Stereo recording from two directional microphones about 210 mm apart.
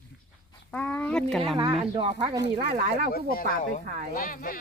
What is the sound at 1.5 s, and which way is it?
Speech, 25° right (ahead or behind).